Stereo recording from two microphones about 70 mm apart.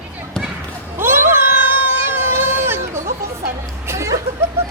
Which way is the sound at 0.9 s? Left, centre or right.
Right.